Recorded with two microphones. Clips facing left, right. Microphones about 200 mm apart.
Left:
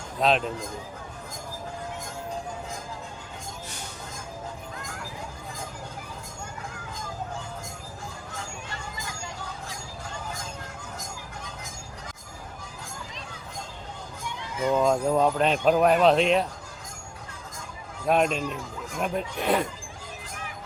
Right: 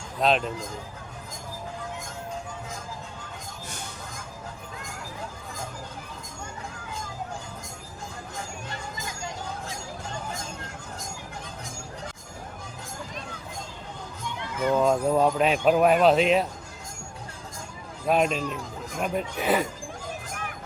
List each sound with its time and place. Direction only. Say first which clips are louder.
0.2 s speech: even; centre (ahead or behind)
14.8 s speech: right 1 dB; 5° right (ahead or behind)
18.0 s speech: even; centre (ahead or behind)
20.3 s music: right 3 dB; 55° right (ahead or behind)